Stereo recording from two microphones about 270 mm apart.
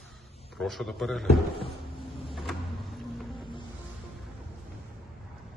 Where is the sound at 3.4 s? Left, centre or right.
Centre.